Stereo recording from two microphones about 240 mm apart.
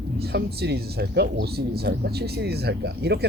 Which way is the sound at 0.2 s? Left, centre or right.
Right.